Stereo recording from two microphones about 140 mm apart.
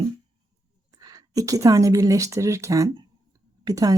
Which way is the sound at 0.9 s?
25° right (ahead or behind).